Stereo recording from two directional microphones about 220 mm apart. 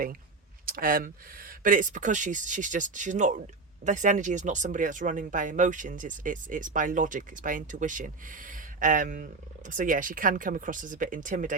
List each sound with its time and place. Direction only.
0.6 s speech: 40° right (ahead or behind)